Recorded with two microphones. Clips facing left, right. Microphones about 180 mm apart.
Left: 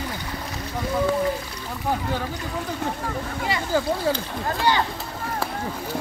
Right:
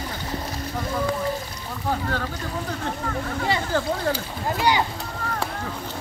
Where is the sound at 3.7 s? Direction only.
10° left (ahead or behind).